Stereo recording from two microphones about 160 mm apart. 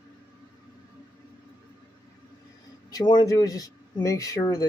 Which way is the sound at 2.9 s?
25° left (ahead or behind).